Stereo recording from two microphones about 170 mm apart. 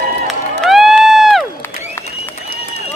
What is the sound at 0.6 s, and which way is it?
Crowd, centre (ahead or behind).